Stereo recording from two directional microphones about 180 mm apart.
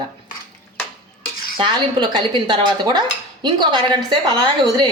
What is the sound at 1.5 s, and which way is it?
A woman's voice, 25° right (ahead or behind).